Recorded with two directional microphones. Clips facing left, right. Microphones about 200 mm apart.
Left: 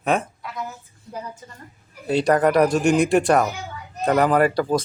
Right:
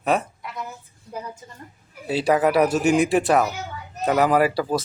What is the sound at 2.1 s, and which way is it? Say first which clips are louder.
Speech: left 2 dB; 5° right (ahead or behind).